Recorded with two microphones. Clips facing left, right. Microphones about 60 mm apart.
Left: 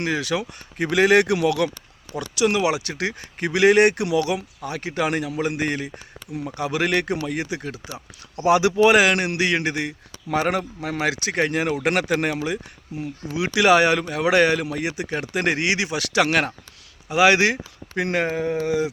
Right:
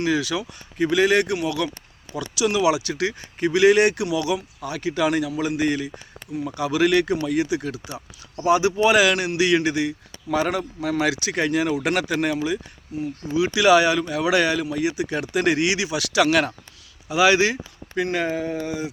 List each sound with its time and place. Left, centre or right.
0.0 s speech: left
2.4 s speech: left
8.4 s speech: left
9.0 s speech: left
11.9 s speech: left
13.0 s speech: left
15.2 s speech: left
17.1 s speech: left
18.2 s speech: left